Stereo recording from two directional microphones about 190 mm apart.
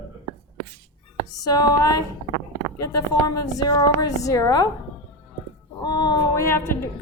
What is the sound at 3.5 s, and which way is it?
A woman's voice, 20° left (ahead or behind).